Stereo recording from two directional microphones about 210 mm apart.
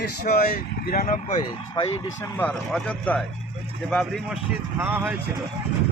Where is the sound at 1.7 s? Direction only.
20° left (ahead or behind).